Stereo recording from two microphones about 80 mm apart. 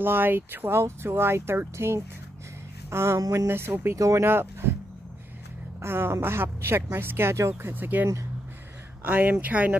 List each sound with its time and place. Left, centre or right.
0.0 s a woman's voice: right
3.9 s speech: right
5.8 s a woman's voice: right
7.7 s speech: right